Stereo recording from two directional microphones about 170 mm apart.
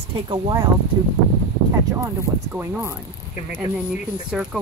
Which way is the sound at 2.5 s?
10° right (ahead or behind).